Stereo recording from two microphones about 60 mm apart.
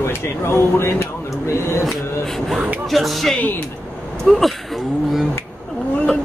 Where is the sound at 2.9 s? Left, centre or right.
Centre.